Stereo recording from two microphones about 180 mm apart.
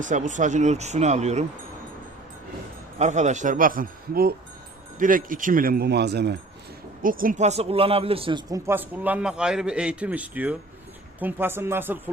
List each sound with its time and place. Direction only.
0.0 s speech: 45° right (ahead or behind)
3.0 s a man's voice: 40° right (ahead or behind); by 6.3 s 65° right (ahead or behind)
7.0 s a man's voice: 50° right (ahead or behind); by 11.9 s 10° right (ahead or behind)